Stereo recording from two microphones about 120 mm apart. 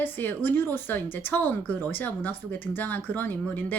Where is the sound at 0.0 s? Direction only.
15° left (ahead or behind).